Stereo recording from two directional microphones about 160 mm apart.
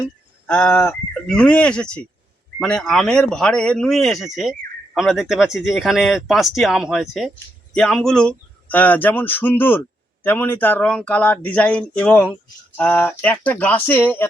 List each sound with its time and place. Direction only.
0.4 s speech: 5° left (ahead or behind)